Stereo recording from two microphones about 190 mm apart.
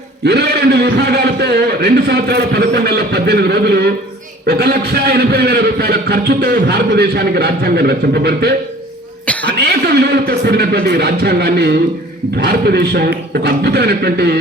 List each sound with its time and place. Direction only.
0.3 s a man's voice: 60° right (ahead or behind)
9.2 s cough: 5° left (ahead or behind)
9.6 s a man's voice: 55° right (ahead or behind)